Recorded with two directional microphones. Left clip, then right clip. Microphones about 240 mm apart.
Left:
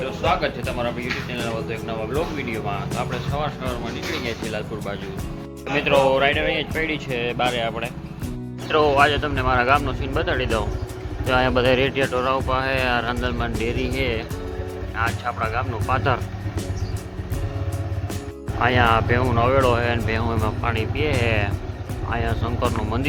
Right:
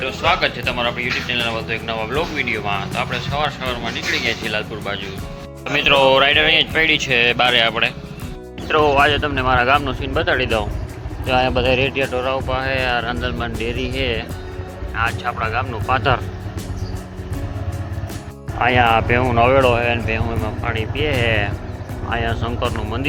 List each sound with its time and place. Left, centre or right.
0.0 s speech: centre
11.3 s speech: centre
18.6 s speech: centre